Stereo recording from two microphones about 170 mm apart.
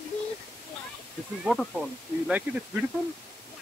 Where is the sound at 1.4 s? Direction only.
Centre (ahead or behind).